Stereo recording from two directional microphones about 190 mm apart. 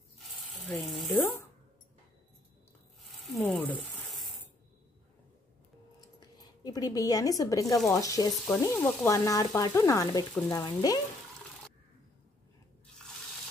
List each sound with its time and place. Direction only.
0.4 s speech: centre (ahead or behind)
3.1 s snake: centre (ahead or behind)
3.3 s a sound: 5° left (ahead or behind)
5.9 s a sound: 20° left (ahead or behind)
7.9 s speech: 15° left (ahead or behind)
10.5 s frying: 20° left (ahead or behind)